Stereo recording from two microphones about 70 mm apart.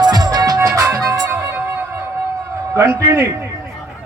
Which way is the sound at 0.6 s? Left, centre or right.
Right.